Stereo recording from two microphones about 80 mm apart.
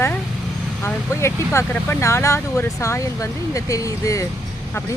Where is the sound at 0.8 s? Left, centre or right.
Left.